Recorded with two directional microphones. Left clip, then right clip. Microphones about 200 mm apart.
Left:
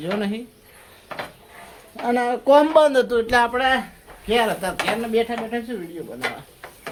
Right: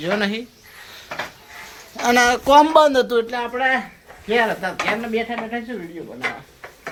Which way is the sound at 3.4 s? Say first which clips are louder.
Even; 25° left (ahead or behind).